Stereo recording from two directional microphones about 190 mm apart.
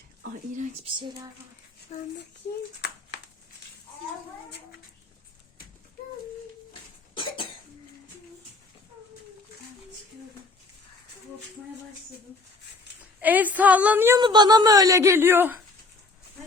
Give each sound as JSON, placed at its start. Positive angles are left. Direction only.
{"t": 0.9, "sound": "speech", "side_deg": -20}
{"t": 1.9, "sound": "a child's voice", "side_deg": 40}
{"t": 7.1, "sound": "cough", "side_deg": 25}
{"t": 13.1, "sound": "speech", "side_deg": -10}
{"t": 14.2, "sound": "speech", "side_deg": -20}